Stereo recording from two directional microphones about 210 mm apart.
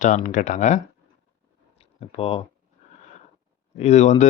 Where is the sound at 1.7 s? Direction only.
30° left (ahead or behind).